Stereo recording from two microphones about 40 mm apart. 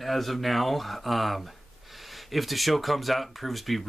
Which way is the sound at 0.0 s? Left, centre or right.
Centre.